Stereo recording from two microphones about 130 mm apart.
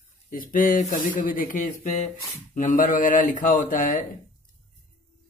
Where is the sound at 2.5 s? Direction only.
80° left.